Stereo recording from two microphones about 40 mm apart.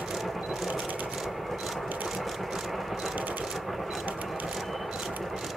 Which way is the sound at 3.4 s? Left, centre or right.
Centre.